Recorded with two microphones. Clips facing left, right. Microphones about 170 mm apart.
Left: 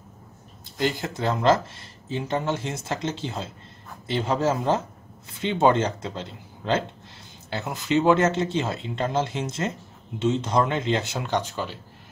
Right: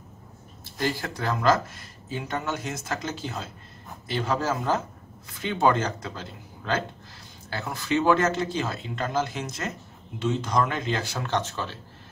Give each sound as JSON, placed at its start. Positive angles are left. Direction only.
{"t": 0.7, "sound": "speech", "side_deg": 20}